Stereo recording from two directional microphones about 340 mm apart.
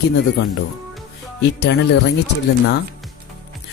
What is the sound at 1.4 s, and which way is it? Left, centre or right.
Speech, left.